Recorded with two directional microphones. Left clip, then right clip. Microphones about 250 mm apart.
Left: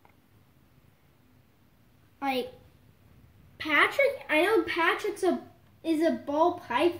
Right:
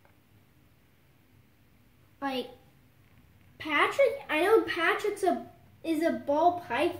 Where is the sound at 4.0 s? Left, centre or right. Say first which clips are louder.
Left 1 dB; left.